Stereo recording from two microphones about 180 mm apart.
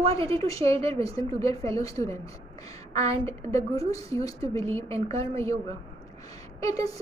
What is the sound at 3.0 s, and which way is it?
Speech, 35° right (ahead or behind).